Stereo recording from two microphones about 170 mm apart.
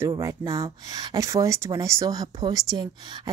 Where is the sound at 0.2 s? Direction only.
20° right (ahead or behind).